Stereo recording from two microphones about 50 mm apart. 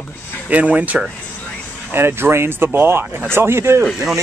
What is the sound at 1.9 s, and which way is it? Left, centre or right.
Speech, right.